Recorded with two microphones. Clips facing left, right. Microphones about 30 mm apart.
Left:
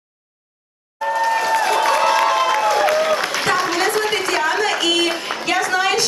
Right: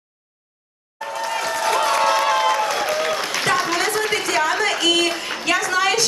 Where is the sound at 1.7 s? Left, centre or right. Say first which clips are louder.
Right 1 dB; left.